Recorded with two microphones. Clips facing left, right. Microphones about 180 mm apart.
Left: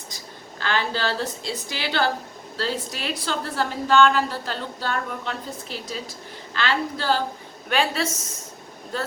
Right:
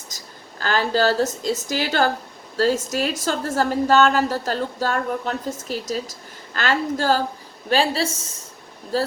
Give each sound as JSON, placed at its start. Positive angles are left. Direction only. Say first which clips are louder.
{"t": 0.1, "sound": "a sound", "louder": "left 1 dB", "side_deg": -45}
{"t": 0.6, "sound": "a woman's voice", "louder": "right 6 dB", "side_deg": -40}
{"t": 7.7, "sound": "a woman's voice", "louder": "right 3 dB", "side_deg": -30}